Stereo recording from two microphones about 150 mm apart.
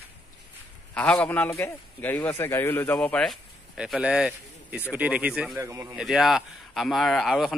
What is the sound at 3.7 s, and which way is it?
Speech, 5° right (ahead or behind).